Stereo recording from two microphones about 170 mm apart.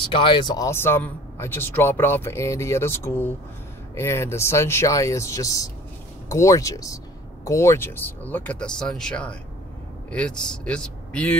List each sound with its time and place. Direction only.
0.1 s speech: 30° left (ahead or behind)
0.7 s speech: 15° left (ahead or behind)